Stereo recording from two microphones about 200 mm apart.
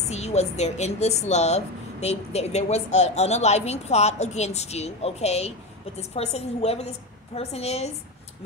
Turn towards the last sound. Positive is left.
turn(degrees=30)  # may be behind; listen again after turning